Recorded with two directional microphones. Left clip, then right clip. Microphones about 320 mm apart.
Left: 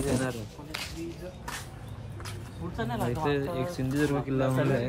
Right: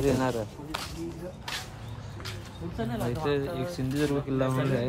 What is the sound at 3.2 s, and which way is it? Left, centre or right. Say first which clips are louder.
Speech: right 1 dB; centre.